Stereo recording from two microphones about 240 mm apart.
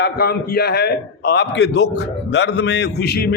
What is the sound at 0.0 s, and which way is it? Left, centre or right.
A man's voice, left.